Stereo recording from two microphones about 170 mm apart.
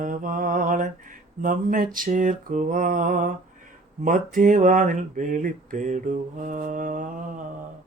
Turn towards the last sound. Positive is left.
turn(degrees=-50)  # may be behind; listen again after turning